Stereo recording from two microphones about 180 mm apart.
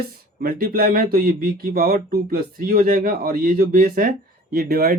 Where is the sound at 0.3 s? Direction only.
55° right (ahead or behind).